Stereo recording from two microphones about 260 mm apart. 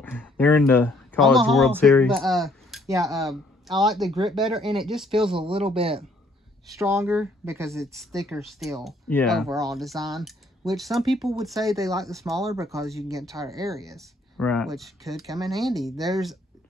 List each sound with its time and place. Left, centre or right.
0.0 s speech: centre
2.9 s a woman's voice: centre
3.3 s speech: centre
5.3 s speech: right
6.7 s a woman's voice: centre
8.4 s speech: centre
9.5 s a woman's voice: centre
10.0 s speech: centre
11.5 s a woman's voice: centre
13.9 s speech: centre